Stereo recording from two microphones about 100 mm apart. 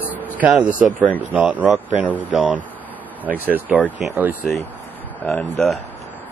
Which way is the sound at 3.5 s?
20° right (ahead or behind).